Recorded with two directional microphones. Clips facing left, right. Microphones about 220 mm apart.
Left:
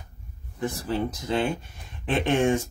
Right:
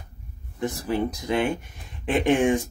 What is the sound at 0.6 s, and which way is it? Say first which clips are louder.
Speech: right 2 dB; 15° right (ahead or behind).